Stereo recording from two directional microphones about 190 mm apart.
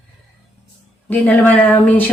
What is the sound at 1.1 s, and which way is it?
Speech, 10° left (ahead or behind).